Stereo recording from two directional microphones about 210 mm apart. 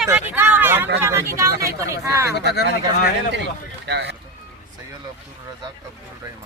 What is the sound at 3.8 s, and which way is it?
Speech, 55° right (ahead or behind).